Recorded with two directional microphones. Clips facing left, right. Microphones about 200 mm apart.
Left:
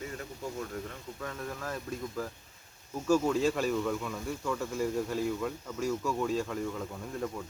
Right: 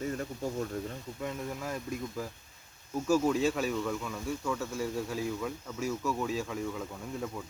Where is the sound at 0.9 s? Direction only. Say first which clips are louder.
Right 3 dB; 20° right (ahead or behind).